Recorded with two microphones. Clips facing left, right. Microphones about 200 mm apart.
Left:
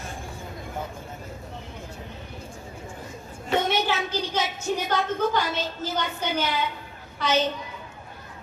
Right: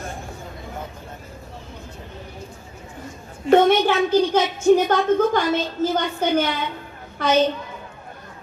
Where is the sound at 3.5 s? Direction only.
50° right (ahead or behind).